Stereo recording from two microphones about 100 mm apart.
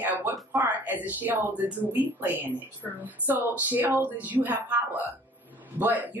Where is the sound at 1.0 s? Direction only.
20° right (ahead or behind).